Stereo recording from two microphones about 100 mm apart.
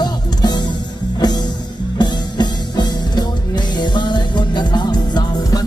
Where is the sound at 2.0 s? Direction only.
45° left (ahead or behind).